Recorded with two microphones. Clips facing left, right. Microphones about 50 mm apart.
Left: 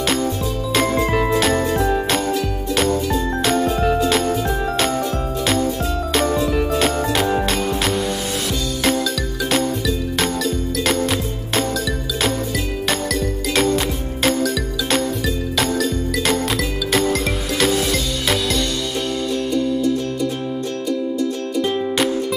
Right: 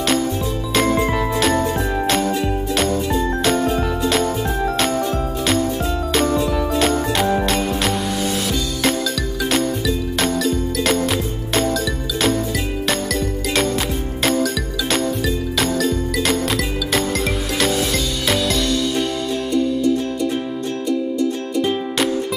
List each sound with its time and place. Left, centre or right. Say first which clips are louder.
1.4 s jingle bell: even; centre
3.4 s jingle: left 3 dB; centre
6.1 s music: even; centre
9.5 s music: even; centre
12.8 s music: even; centre
21.5 s music: left 1 dB; centre